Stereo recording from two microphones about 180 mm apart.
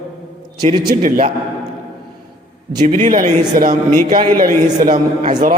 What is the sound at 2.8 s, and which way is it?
A man's voice, 50° right (ahead or behind).